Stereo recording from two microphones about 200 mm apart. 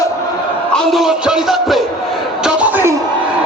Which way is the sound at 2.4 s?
10° right (ahead or behind).